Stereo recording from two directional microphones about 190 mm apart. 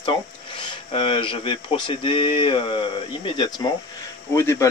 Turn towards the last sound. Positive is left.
turn(degrees=15)  # may be behind; listen again after turning